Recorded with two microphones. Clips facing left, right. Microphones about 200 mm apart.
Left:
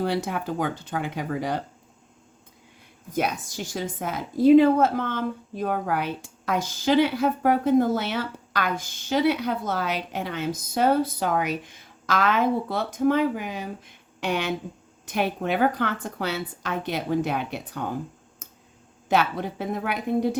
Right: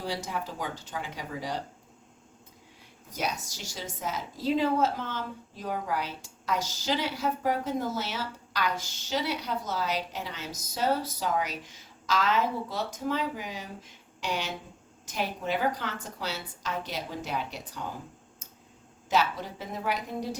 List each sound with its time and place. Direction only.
0.0 s a woman's voice: 60° left (ahead or behind)
3.1 s a woman's voice: 55° left (ahead or behind)
19.0 s a woman's voice: 60° left (ahead or behind)